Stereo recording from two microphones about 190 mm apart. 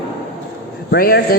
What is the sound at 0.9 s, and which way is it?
Speech, 55° left (ahead or behind).